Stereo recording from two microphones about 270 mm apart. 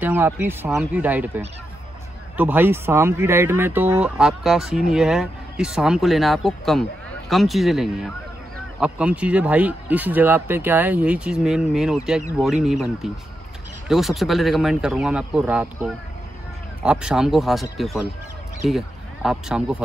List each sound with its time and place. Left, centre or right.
0.0 s speech: centre